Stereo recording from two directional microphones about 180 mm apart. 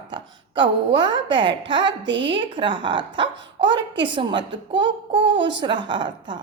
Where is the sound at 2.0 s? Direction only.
85° right.